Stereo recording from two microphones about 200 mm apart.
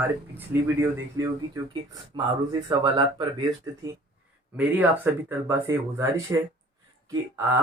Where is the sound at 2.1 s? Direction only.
25° right (ahead or behind).